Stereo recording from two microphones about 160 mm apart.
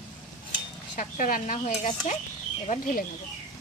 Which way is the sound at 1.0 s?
60° left (ahead or behind).